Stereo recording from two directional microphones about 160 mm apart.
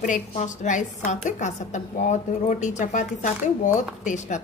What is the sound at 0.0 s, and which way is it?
A woman's voice, 50° left (ahead or behind).